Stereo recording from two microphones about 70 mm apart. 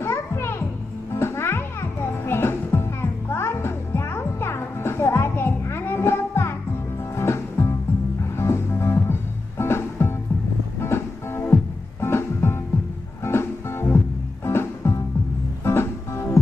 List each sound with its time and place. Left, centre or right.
0.0 s music: left